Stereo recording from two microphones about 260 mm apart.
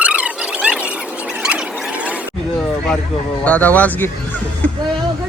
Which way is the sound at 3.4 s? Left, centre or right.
Centre.